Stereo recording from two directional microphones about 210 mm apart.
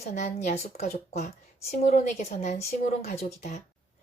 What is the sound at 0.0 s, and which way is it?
A woman's voice, 30° left (ahead or behind).